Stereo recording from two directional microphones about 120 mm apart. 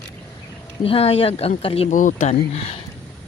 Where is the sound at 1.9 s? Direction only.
90° left; by 2.8 s 55° left (ahead or behind).